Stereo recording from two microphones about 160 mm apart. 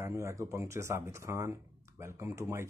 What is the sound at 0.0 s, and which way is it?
Speech, 20° right (ahead or behind).